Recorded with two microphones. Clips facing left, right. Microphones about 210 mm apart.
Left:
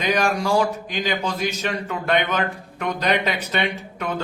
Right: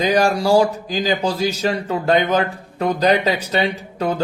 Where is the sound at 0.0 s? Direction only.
35° right (ahead or behind).